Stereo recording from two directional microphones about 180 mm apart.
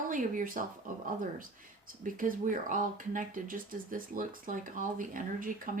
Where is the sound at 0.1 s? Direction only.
45° right (ahead or behind).